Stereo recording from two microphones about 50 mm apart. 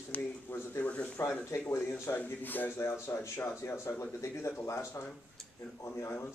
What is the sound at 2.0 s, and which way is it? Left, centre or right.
Speech, left.